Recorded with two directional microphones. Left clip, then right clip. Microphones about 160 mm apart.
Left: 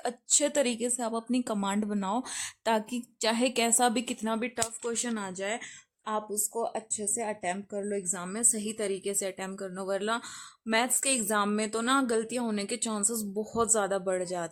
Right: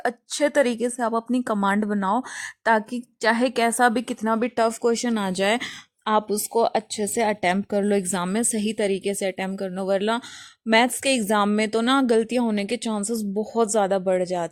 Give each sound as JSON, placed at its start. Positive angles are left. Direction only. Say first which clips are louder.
{"t": 0.0, "sound": "a woman's voice", "louder": "right 6 dB", "side_deg": -25}
{"t": 5.2, "sound": "speech", "louder": "right 12 dB", "side_deg": -75}